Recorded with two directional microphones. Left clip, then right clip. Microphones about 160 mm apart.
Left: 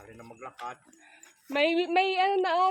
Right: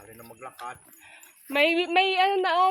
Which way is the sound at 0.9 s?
30° right (ahead or behind).